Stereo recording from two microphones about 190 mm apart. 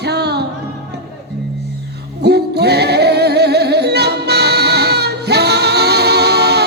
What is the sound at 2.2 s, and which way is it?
Music, 60° right (ahead or behind).